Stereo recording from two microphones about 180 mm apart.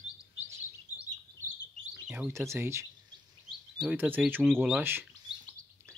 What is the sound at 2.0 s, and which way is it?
Bird, 5° right (ahead or behind).